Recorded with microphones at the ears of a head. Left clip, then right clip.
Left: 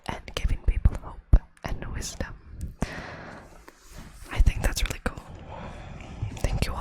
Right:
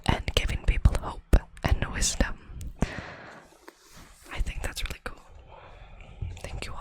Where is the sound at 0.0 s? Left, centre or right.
Right.